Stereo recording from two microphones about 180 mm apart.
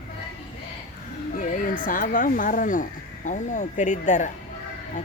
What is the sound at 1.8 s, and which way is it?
Speech, 50° left (ahead or behind).